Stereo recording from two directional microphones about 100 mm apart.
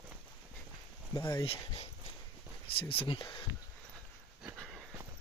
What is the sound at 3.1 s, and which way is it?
Speech, 50° left (ahead or behind).